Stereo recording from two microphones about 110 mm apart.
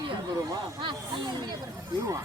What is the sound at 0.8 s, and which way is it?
Speech, 50° right (ahead or behind).